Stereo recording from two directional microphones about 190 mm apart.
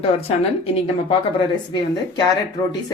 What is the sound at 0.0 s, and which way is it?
A woman's voice, 30° left (ahead or behind).